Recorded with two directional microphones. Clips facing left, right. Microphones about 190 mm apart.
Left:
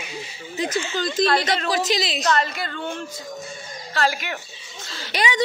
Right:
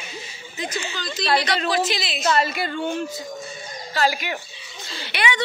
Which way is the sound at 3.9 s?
5° right (ahead or behind).